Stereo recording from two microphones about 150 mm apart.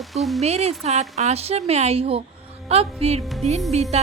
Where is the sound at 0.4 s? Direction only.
45° right (ahead or behind).